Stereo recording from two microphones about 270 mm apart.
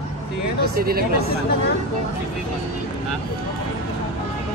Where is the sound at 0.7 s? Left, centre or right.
Right.